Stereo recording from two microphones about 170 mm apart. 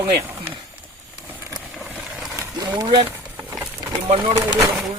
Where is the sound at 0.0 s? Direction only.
15° right (ahead or behind).